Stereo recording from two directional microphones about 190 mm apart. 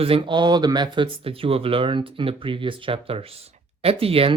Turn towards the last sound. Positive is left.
turn(degrees=-30)  # may be behind; listen again after turning